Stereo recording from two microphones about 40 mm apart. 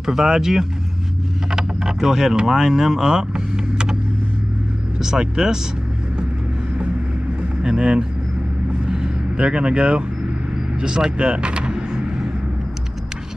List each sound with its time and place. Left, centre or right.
0.0 s speech: centre
1.5 s a sound: centre
2.0 s speech: centre
5.0 s speech: centre
7.6 s speech: right
8.8 s vehicle: centre
10.8 s speech: right